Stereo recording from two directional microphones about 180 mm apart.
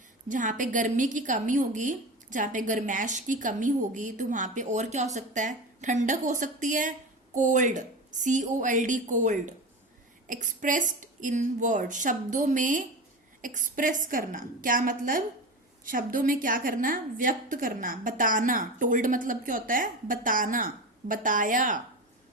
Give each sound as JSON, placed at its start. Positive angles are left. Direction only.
{"t": 0.3, "sound": "a woman's voice", "side_deg": -45}